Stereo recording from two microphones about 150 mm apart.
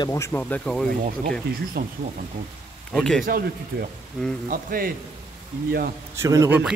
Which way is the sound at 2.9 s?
5° left (ahead or behind).